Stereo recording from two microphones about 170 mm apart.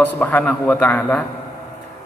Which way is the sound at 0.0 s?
10° left (ahead or behind).